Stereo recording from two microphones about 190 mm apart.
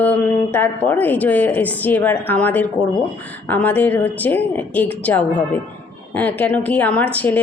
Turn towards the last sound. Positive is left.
turn(degrees=10)  # may be behind; listen again after turning